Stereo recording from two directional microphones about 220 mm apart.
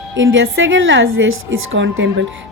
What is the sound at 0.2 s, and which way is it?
A woman's voice, 60° right (ahead or behind).